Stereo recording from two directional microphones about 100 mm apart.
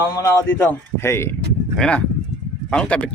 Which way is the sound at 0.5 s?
15° left (ahead or behind).